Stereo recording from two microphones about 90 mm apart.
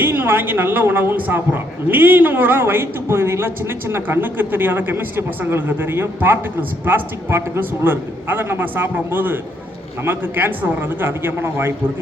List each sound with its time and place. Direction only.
0.0 s a man's voice: 25° right (ahead or behind)